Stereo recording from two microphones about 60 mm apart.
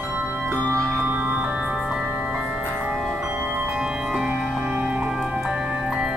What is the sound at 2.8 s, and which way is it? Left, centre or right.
Music, right.